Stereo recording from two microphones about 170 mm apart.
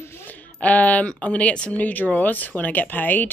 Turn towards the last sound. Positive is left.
turn(degrees=10)  # may be behind; listen again after turning